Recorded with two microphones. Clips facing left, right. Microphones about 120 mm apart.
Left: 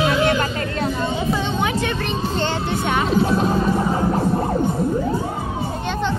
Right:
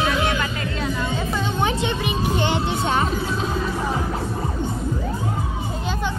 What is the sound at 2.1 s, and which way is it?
Music, 15° right (ahead or behind).